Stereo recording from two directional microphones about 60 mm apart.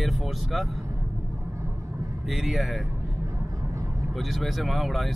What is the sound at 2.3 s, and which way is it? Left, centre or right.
Speech, centre.